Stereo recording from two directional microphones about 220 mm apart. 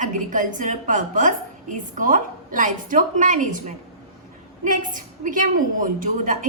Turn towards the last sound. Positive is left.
turn(degrees=-35)  # may be behind; listen again after turning